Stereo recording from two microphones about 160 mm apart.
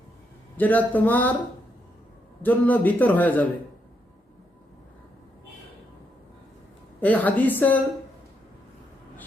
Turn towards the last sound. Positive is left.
turn(degrees=10)  # may be behind; listen again after turning